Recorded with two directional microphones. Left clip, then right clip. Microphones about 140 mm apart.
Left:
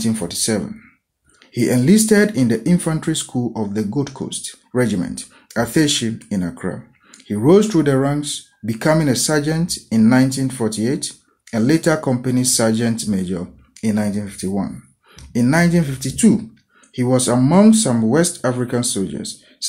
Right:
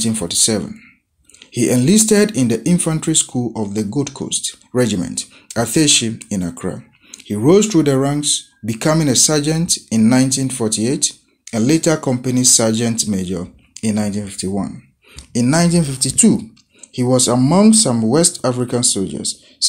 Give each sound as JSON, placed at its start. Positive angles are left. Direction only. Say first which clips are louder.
{"t": 0.0, "sound": "speech", "louder": "right 2 dB", "side_deg": -25}
{"t": 1.4, "sound": "speech", "louder": "right 2 dB", "side_deg": -25}